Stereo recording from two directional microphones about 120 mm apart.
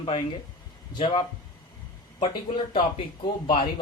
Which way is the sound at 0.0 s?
55° left (ahead or behind).